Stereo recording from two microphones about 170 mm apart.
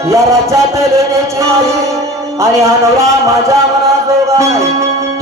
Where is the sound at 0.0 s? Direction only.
15° right (ahead or behind).